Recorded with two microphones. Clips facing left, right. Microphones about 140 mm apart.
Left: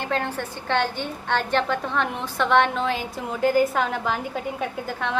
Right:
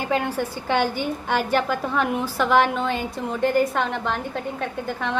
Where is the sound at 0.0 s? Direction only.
10° right (ahead or behind).